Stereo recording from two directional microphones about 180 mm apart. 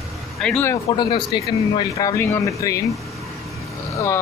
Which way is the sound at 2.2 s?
15° left (ahead or behind).